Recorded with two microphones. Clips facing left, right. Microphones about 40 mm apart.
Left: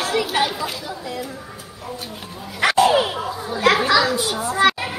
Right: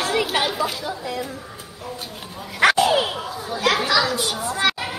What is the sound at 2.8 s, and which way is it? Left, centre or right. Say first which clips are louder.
Bow-wow: left 3 dB; left.